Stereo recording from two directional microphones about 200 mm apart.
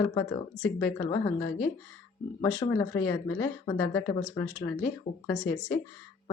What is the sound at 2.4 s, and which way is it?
Speech, 20° left (ahead or behind).